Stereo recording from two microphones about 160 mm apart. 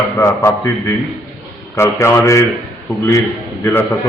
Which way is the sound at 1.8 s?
20° left (ahead or behind).